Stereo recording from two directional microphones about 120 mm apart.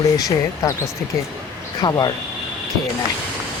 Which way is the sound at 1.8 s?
35° left (ahead or behind).